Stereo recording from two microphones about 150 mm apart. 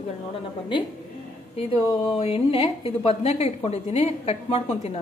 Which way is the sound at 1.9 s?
40° left (ahead or behind).